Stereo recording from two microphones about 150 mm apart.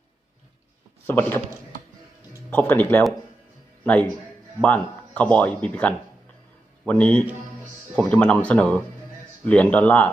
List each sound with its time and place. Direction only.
1.0 s speech: 15° left (ahead or behind)
2.5 s speech: 10° left (ahead or behind)
4.6 s speech: 10° left (ahead or behind)